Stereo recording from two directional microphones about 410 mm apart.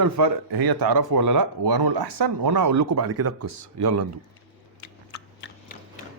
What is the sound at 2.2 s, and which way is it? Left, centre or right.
Speech, right.